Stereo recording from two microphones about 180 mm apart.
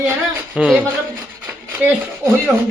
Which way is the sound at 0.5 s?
5° right (ahead or behind).